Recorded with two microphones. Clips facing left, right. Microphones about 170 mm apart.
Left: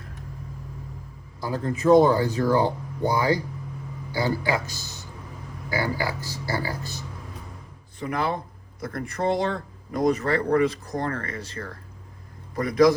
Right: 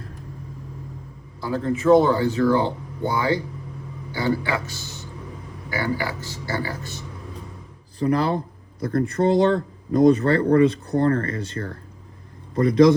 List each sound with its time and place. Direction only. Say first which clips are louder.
1.4 s speech: right 3 dB; 40° left (ahead or behind)
7.9 s a man's voice: right 6 dB; 35° right (ahead or behind)